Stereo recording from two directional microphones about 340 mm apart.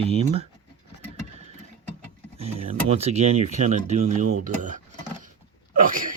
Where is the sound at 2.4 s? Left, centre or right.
Centre.